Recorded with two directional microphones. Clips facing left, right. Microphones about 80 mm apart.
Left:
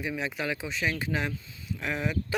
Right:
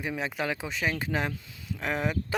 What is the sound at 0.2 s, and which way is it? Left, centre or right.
Speech, right.